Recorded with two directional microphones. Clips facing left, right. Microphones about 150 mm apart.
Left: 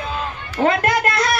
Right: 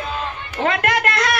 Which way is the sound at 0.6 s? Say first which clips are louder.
Left 3 dB; 35° left (ahead or behind).